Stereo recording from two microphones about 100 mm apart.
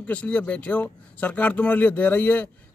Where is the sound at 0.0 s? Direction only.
15° left (ahead or behind).